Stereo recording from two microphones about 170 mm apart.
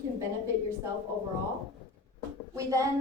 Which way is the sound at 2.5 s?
20° right (ahead or behind).